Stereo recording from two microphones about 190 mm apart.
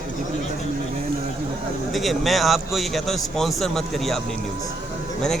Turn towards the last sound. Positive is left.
turn(degrees=0)  # may be behind; listen again after turning